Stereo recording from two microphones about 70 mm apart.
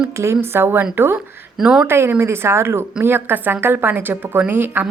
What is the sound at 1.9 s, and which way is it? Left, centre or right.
A woman's voice, right.